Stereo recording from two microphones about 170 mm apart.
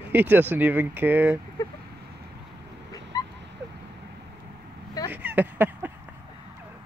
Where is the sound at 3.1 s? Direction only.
20° left (ahead or behind).